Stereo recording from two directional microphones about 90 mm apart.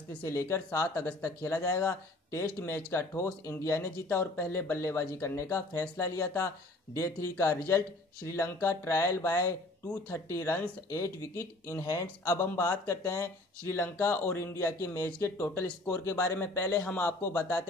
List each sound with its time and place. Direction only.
0.2 s speech: 30° left (ahead or behind)
13.7 s speech: 25° left (ahead or behind)